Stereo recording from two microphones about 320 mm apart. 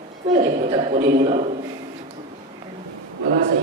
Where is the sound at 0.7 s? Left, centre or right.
Centre.